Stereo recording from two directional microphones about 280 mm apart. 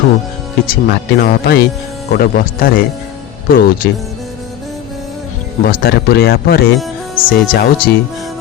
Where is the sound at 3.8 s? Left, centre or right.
Left.